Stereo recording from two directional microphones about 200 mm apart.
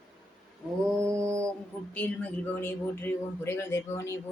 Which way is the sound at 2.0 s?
10° left (ahead or behind).